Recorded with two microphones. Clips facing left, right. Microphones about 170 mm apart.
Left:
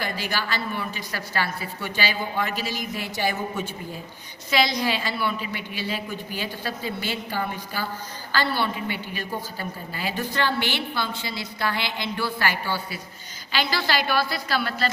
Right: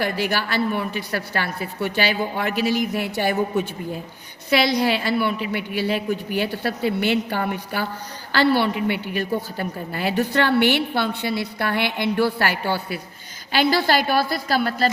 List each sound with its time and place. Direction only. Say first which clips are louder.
0.0 s a woman's voice: right 6 dB; 60° right (ahead or behind)
4.4 s a woman's voice: right 4 dB; 60° right (ahead or behind)